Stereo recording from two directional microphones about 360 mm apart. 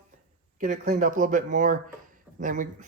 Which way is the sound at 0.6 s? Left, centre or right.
Right.